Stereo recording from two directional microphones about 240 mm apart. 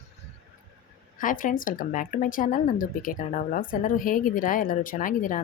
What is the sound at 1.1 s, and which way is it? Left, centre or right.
Speech, left.